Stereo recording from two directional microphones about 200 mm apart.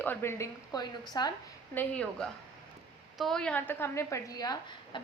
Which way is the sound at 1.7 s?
10° left (ahead or behind).